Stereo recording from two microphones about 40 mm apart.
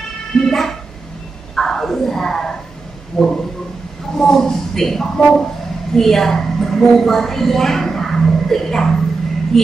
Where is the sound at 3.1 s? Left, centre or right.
Centre.